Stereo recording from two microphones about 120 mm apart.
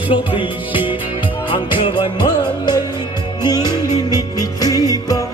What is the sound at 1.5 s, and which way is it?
Music, 45° left (ahead or behind).